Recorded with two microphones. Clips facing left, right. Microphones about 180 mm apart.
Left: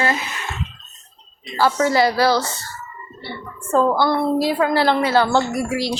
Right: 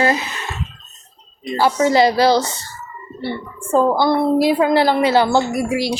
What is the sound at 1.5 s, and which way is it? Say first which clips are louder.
A woman's voice: right 3 dB; 20° right (ahead or behind).